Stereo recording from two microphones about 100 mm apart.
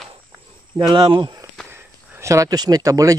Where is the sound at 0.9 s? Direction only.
55° right (ahead or behind).